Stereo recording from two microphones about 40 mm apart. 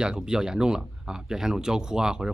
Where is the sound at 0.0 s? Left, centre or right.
Centre.